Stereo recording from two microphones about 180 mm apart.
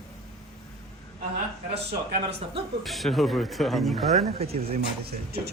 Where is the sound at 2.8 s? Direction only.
Centre (ahead or behind).